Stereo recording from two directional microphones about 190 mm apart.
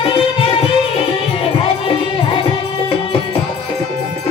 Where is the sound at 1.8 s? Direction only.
30° left (ahead or behind).